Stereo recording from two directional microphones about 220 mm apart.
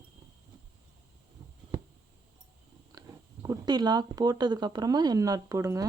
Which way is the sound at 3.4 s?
20° right (ahead or behind).